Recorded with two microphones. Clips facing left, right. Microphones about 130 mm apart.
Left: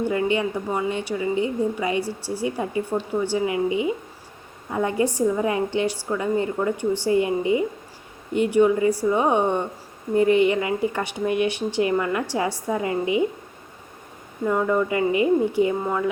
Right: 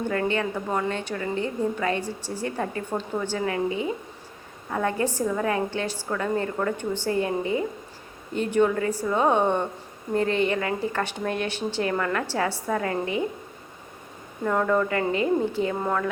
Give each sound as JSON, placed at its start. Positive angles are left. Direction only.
{"t": 0.1, "sound": "speech", "side_deg": 15}
{"t": 14.4, "sound": "speech", "side_deg": 10}